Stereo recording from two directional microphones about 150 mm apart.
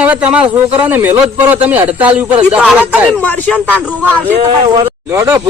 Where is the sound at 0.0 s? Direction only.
10° right (ahead or behind).